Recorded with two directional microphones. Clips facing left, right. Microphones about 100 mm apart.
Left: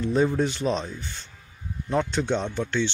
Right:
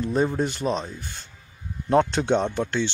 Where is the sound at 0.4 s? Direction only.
40° right (ahead or behind).